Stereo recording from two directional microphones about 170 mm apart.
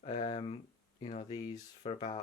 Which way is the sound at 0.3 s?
35° left (ahead or behind).